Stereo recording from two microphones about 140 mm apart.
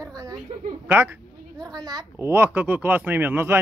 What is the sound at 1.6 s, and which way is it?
Speech, 30° right (ahead or behind).